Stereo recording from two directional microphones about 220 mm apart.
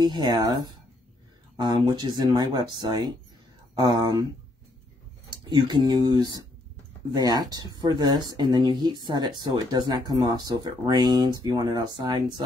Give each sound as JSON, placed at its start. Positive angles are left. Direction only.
{"t": 0.0, "sound": "speech", "side_deg": -20}
{"t": 5.3, "sound": "speech", "side_deg": -20}